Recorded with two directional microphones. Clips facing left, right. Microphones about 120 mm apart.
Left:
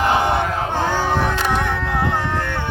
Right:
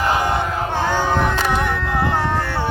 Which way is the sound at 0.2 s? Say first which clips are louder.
Left 1 dB; 25° left (ahead or behind).